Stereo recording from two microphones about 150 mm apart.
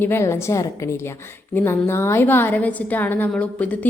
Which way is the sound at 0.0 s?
15° left (ahead or behind).